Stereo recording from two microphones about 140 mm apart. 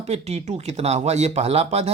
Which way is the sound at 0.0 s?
50° right (ahead or behind).